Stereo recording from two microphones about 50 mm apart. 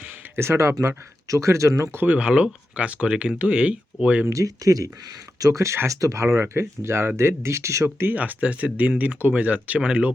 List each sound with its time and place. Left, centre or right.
0.3 s speech: right
2.0 s speech: right
4.3 s speech: right
6.2 s speech: right
8.1 s speech: right